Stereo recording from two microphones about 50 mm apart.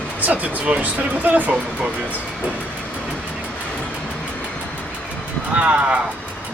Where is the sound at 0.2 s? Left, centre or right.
Right.